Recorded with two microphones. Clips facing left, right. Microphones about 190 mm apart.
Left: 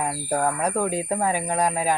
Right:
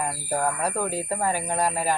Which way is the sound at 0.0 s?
5° left (ahead or behind).